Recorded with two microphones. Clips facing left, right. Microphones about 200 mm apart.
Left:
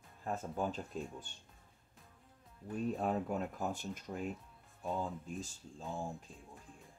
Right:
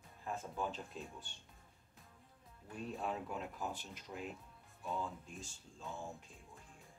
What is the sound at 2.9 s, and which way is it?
Speech, 45° left (ahead or behind).